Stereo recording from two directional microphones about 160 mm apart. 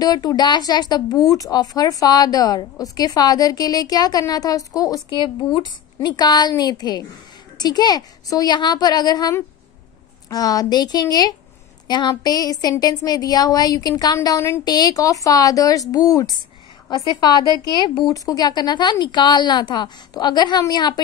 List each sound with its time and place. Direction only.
0.0 s speech: 25° left (ahead or behind)